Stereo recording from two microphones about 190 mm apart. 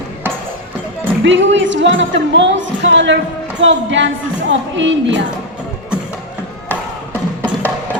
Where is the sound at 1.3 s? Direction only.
75° right (ahead or behind).